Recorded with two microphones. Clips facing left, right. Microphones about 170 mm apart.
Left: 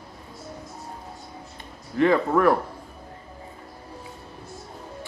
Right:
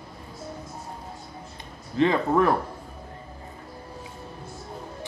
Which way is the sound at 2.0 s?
20° right (ahead or behind).